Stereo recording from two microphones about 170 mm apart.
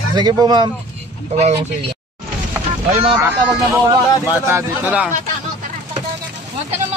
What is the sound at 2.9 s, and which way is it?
Speech, 35° right (ahead or behind).